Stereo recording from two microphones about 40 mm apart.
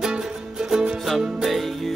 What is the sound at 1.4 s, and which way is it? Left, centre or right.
Music, centre.